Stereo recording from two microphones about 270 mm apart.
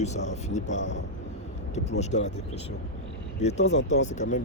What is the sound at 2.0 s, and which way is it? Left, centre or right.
Speech, left.